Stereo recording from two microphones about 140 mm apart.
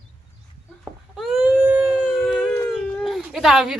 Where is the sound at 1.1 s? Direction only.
Centre (ahead or behind).